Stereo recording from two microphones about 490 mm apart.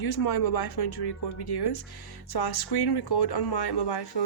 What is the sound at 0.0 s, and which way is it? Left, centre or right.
Speech, left.